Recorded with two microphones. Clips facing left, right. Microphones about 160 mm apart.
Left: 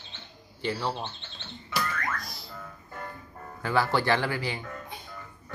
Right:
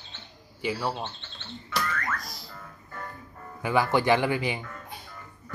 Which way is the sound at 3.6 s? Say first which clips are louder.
Right 2 dB; 15° right (ahead or behind).